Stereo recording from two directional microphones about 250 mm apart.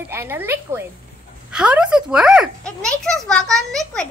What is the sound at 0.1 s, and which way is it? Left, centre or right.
A woman's voice, centre.